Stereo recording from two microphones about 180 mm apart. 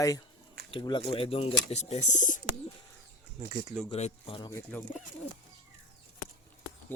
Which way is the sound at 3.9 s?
35° left (ahead or behind).